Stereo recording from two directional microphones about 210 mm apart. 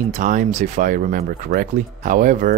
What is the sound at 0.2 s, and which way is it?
Speech, 40° right (ahead or behind).